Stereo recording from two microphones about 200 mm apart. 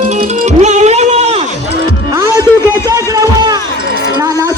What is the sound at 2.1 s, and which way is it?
Music, 15° right (ahead or behind).